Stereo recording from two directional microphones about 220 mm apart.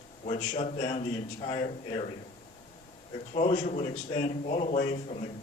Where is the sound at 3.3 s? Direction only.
30° left (ahead or behind).